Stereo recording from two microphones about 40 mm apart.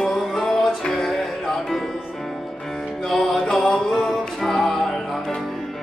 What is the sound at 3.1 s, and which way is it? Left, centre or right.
Music, centre.